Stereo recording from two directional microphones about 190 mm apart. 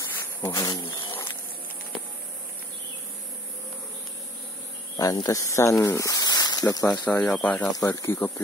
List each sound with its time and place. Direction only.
0.0 s insect: 10° left (ahead or behind)
4.9 s speech: 20° left (ahead or behind)
6.9 s speech: 5° left (ahead or behind)
7.7 s speech: 15° left (ahead or behind)